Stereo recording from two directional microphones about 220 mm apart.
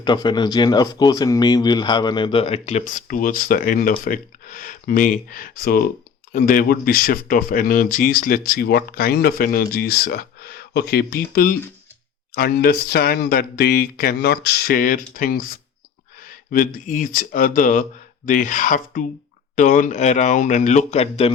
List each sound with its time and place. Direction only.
0.0 s speech: 20° left (ahead or behind)